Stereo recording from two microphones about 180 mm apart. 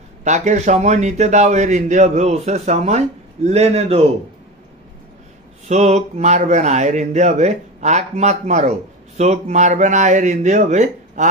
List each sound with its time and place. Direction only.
0.2 s speech: 40° right (ahead or behind)
5.7 s speech: 40° right (ahead or behind)